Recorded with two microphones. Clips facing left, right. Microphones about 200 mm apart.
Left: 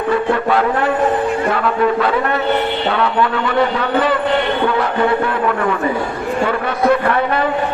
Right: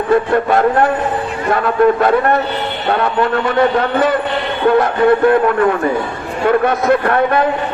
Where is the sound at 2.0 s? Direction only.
45° right (ahead or behind).